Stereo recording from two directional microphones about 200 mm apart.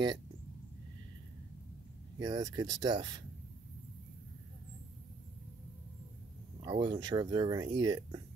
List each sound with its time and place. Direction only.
2.1 s speech: 20° right (ahead or behind)
6.6 s speech: 25° right (ahead or behind)